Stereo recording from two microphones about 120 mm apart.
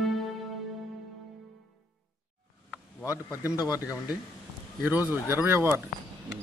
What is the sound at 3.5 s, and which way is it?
Speech, 30° left (ahead or behind).